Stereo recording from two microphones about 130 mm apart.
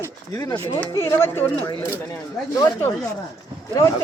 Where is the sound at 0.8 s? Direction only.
20° left (ahead or behind).